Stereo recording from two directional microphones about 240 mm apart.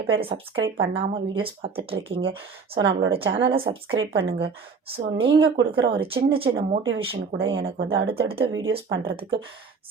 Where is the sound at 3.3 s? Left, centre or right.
Right.